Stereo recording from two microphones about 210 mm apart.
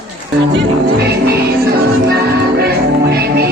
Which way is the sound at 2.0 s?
50° right (ahead or behind).